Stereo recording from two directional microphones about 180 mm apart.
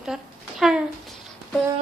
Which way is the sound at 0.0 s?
5° right (ahead or behind).